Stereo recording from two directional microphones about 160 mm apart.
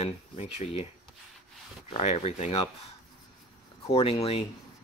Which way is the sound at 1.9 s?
40° left (ahead or behind).